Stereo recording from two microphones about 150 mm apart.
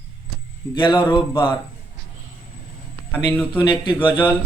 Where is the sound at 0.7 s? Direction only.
30° left (ahead or behind).